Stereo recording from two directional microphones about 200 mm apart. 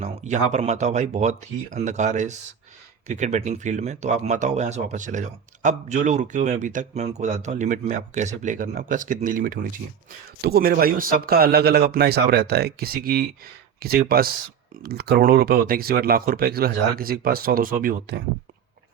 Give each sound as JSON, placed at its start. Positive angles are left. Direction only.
{"t": 0.0, "sound": "speech", "side_deg": -35}